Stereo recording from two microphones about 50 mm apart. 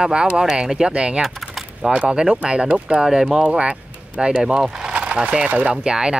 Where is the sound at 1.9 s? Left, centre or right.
Centre.